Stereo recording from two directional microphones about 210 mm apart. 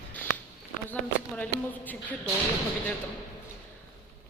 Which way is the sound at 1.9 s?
5° left (ahead or behind).